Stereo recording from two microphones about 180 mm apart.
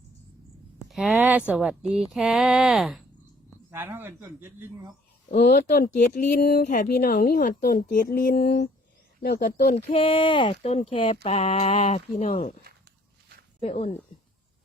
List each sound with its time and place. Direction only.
0.9 s a man's voice: centre (ahead or behind)
5.3 s speech: 40° left (ahead or behind)
13.6 s speech: 35° left (ahead or behind)